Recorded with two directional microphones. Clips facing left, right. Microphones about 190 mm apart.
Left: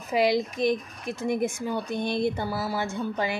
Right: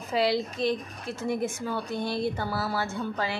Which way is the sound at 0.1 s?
15° left (ahead or behind).